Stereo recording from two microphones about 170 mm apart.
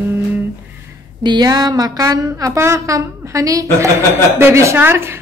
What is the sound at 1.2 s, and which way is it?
A woman's voice, 25° right (ahead or behind).